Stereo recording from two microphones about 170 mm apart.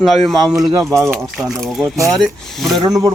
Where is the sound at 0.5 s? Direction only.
15° right (ahead or behind).